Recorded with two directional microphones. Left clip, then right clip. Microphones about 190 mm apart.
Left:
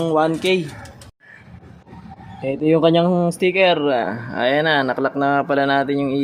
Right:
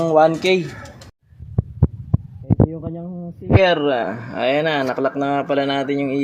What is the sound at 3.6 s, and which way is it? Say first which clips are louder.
Speech: right 2 dB; centre (ahead or behind).